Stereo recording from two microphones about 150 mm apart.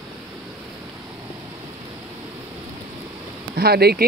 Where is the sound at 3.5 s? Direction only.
90° right.